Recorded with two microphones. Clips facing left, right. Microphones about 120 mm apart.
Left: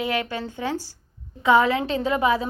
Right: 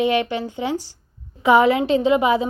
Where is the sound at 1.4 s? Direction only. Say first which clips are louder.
Right 4 dB; 30° right (ahead or behind).